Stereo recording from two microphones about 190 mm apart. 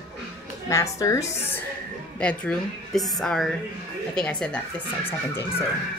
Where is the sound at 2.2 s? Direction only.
5° left (ahead or behind).